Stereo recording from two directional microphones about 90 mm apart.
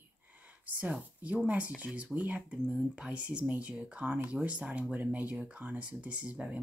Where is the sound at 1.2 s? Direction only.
15° right (ahead or behind).